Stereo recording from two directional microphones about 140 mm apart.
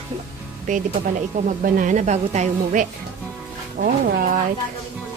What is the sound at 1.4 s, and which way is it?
A woman's voice, 70° right (ahead or behind).